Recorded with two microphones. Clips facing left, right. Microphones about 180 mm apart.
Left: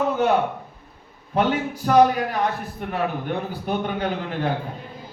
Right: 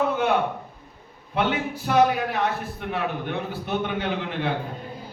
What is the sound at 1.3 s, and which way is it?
Speech, 45° left (ahead or behind).